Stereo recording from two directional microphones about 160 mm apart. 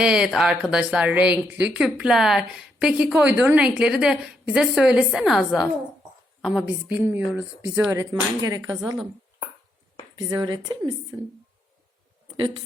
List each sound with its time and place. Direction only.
0.0 s a woman's voice: 5° right (ahead or behind); by 8.8 s 25° right (ahead or behind)
10.2 s a woman's voice: 25° right (ahead or behind)